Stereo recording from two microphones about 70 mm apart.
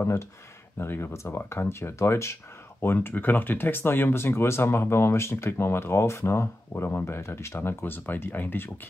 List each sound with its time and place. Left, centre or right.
0.0 s speech: left